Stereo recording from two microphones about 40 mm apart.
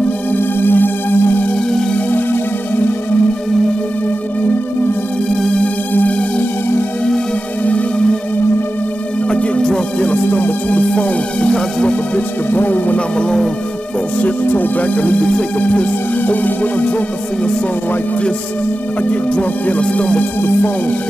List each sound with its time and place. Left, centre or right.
0.4 s music: left
6.0 s music: left
7.6 s music: left
9.3 s music: left
10.1 s music: left
10.7 s music: left
12.4 s music: left
12.9 s music: left
14.1 s music: left
15.0 s music: left
19.0 s music: left
19.8 s music: left